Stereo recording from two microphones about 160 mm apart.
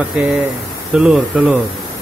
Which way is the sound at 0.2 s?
10° right (ahead or behind).